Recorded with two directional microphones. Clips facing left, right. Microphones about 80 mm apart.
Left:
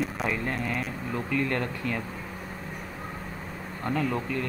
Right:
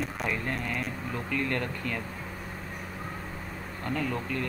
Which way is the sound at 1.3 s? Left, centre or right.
Centre.